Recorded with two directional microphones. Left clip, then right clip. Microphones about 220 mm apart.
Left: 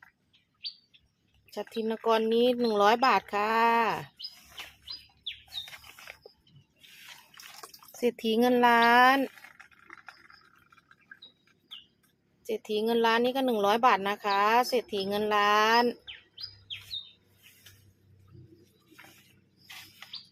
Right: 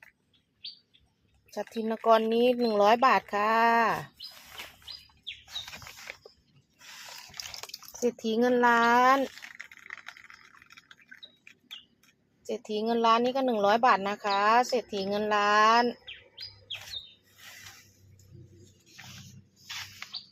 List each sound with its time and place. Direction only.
1.5 s speech: centre (ahead or behind)
8.0 s speech: 10° left (ahead or behind)
9.6 s a sound: 25° right (ahead or behind)
12.5 s speech: centre (ahead or behind)